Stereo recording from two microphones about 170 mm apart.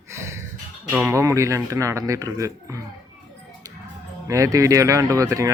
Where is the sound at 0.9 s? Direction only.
15° right (ahead or behind).